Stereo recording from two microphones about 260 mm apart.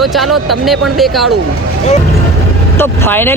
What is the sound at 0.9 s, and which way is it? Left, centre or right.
Speech, centre.